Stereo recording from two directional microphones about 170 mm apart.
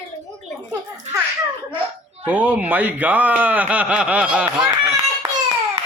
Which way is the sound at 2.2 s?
10° right (ahead or behind).